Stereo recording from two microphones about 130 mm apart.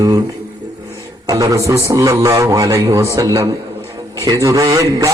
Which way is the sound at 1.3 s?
25° right (ahead or behind).